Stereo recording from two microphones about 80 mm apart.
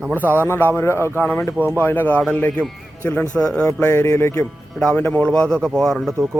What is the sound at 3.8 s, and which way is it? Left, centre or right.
Speech, left.